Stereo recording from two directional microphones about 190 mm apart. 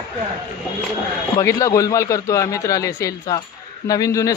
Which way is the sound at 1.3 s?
15° left (ahead or behind).